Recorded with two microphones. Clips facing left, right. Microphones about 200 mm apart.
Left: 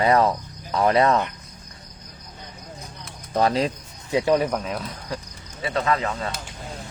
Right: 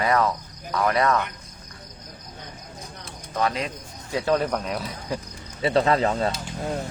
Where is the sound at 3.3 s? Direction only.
35° left (ahead or behind).